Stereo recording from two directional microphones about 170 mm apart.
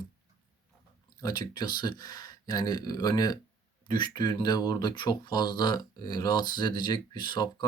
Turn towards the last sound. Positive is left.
turn(degrees=25)  # may be behind; listen again after turning